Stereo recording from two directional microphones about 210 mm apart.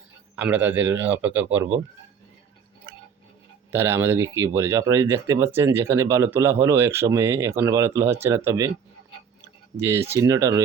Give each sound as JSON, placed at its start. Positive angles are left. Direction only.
{"t": 0.3, "sound": "speech", "side_deg": -5}
{"t": 3.7, "sound": "speech", "side_deg": -10}
{"t": 9.7, "sound": "speech", "side_deg": -10}